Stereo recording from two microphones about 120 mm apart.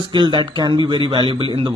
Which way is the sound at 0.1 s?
40° right (ahead or behind).